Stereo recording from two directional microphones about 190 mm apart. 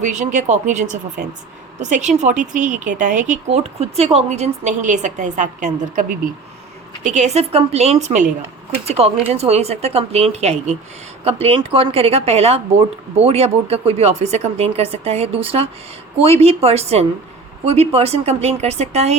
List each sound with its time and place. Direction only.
0.0 s speech: 40° right (ahead or behind)